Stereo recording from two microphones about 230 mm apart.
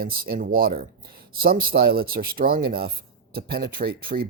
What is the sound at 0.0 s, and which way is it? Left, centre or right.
Speech, right.